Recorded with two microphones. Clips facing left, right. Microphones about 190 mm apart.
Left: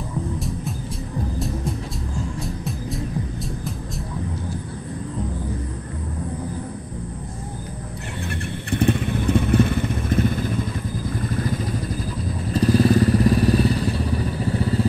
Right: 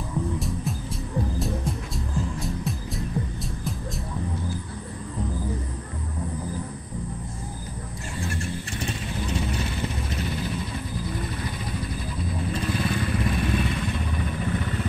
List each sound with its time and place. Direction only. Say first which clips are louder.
0.4 s music: left 1 dB; centre (ahead or behind)
8.2 s vehicle: even; 60° left (ahead or behind); by 14.9 s 30° left (ahead or behind)